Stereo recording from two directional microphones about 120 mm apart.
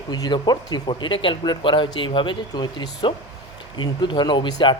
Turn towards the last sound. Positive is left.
turn(degrees=40)  # may be behind; listen again after turning